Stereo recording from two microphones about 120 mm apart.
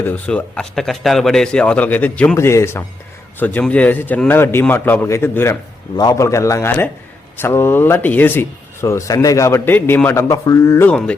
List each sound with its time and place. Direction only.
0.3 s a man's voice: 5° left (ahead or behind)
2.3 s a man's voice: 25° left (ahead or behind)
10.8 s a man's voice: 5° left (ahead or behind)